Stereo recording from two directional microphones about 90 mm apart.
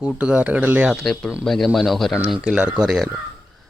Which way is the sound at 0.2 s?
15° right (ahead or behind).